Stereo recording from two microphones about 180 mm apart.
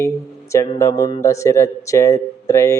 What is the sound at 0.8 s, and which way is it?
Speech, 20° left (ahead or behind).